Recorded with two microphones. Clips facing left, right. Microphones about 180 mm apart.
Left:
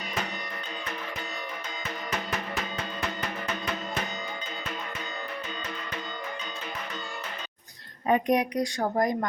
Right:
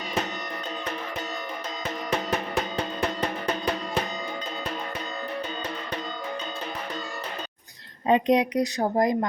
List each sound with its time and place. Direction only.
3.2 s music: 35° right (ahead or behind)
8.0 s a woman's voice: 20° right (ahead or behind)